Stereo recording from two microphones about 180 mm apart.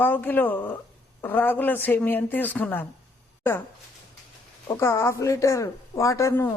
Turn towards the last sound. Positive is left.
turn(degrees=15)  # may be behind; listen again after turning